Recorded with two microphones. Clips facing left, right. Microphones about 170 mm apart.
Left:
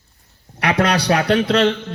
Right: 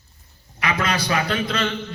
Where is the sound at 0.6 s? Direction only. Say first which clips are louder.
Left 6 dB; 70° left (ahead or behind).